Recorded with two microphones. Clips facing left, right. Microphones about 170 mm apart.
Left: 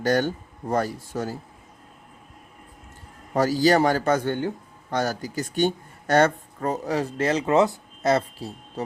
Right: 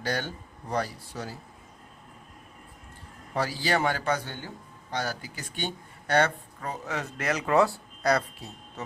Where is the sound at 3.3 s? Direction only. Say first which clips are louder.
Left 9 dB; 40° left (ahead or behind).